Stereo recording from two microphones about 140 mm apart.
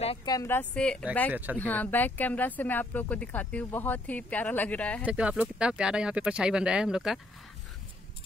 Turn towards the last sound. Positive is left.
turn(degrees=-5)  # may be behind; listen again after turning